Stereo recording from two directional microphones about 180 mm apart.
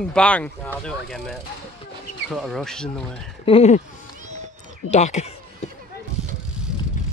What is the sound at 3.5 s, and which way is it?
Speech, 35° left (ahead or behind).